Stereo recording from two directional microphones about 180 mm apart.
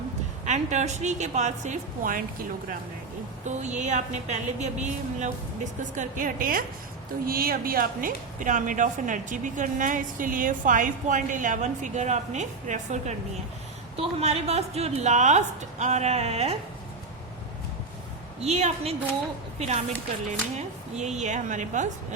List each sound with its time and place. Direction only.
0.4 s a woman's voice: 40° right (ahead or behind)
18.3 s a woman's voice: 35° right (ahead or behind)